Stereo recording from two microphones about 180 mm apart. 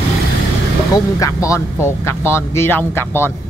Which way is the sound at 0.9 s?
15° left (ahead or behind).